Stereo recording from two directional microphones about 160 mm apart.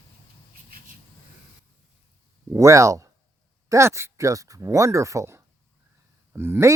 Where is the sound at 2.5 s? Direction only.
20° right (ahead or behind).